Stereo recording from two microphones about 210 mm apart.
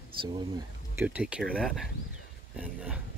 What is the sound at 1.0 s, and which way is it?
Speech, 5° right (ahead or behind).